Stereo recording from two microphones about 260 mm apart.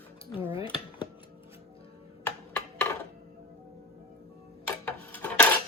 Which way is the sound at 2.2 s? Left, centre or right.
Centre.